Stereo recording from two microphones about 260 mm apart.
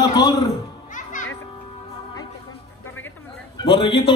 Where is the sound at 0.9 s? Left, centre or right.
Left.